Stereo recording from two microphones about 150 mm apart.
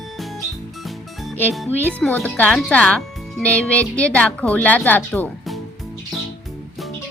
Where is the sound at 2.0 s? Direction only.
10° left (ahead or behind).